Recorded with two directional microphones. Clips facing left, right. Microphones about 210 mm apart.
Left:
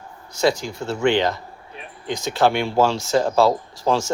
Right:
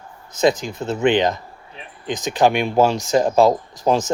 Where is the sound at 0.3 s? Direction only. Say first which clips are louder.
Right 2 dB; 20° right (ahead or behind).